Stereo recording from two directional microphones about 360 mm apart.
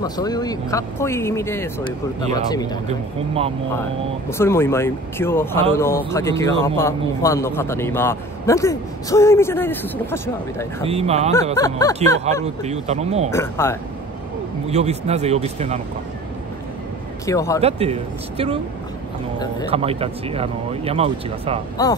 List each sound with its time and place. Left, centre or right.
0.0 s speech: centre
2.9 s speech: centre
4.3 s speech: centre
10.9 s speech: centre
11.5 s speech: centre
12.6 s speech: centre
13.3 s speech: centre
14.7 s speech: centre
17.3 s speech: centre
17.6 s speech: centre
19.7 s speech: centre
21.8 s speech: centre